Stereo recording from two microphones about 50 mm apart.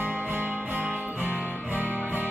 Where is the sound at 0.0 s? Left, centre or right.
Right.